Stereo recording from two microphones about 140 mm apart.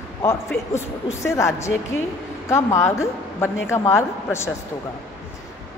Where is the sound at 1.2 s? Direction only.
20° left (ahead or behind).